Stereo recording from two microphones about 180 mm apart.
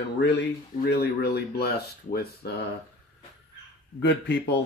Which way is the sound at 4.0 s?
75° left (ahead or behind).